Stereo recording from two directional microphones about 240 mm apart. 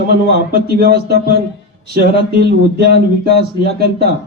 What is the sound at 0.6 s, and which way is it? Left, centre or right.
A man's voice, right.